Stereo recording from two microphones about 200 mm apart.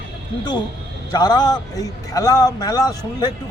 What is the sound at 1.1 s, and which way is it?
A man's voice, 20° left (ahead or behind).